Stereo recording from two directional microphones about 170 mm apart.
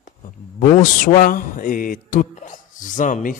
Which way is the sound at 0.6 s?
50° left (ahead or behind).